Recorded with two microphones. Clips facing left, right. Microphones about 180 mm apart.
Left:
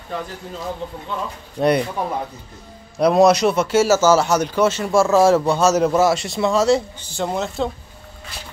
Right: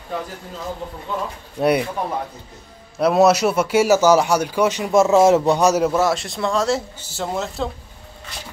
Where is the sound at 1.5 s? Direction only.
10° right (ahead or behind).